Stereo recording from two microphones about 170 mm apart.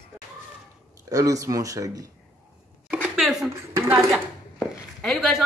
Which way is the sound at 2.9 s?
5° right (ahead or behind).